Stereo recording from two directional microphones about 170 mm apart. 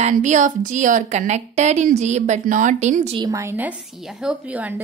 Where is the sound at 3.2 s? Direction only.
20° right (ahead or behind).